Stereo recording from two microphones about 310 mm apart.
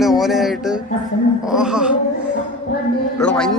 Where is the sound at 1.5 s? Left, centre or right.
Centre.